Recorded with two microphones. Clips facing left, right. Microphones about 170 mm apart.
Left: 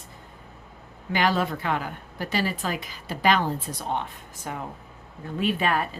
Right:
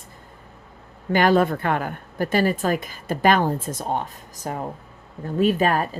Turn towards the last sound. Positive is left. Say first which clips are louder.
# right 5 dB
turn(degrees=-40)  # may be behind; listen again after turning